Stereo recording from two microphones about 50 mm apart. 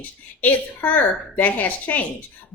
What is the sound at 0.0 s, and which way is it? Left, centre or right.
A woman's voice, left.